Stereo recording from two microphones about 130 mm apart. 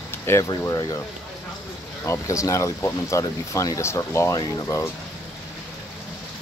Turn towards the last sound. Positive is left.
turn(degrees=25)  # may be behind; listen again after turning